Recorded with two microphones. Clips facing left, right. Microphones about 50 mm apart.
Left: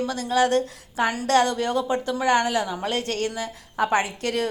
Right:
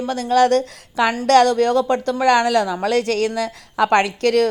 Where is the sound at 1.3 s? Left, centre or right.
Right.